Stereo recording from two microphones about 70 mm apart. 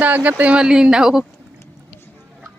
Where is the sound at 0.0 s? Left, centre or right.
Right.